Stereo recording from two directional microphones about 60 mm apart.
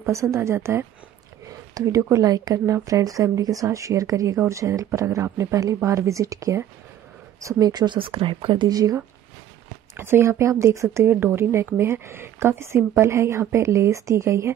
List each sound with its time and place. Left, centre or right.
0.0 s a woman's voice: right
2.0 s speech: right
2.2 s a woman's voice: right
2.6 s speech: right
4.5 s speech: right
8.6 s speech: right
9.9 s a woman's voice: right
11.1 s a woman's voice: right